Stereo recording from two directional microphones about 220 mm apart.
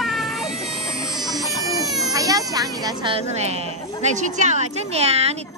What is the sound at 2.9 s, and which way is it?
A woman's voice, 20° right (ahead or behind).